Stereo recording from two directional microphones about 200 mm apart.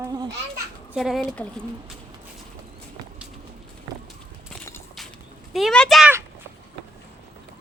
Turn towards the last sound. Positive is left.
turn(degrees=0)  # may be behind; listen again after turning